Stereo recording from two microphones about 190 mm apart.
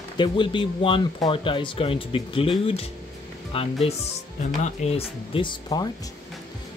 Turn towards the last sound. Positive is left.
turn(degrees=20)  # may be behind; listen again after turning